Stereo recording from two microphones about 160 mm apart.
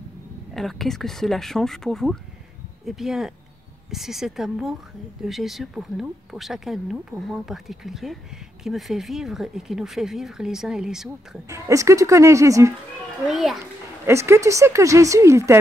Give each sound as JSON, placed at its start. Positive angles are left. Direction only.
{"t": 0.6, "sound": "speech", "side_deg": 0}
{"t": 11.4, "sound": "speech", "side_deg": -20}
{"t": 13.3, "sound": "speech", "side_deg": 0}
{"t": 14.0, "sound": "speech", "side_deg": -15}